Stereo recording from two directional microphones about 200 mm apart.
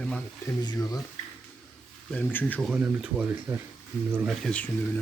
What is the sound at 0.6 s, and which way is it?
Speech, 20° left (ahead or behind).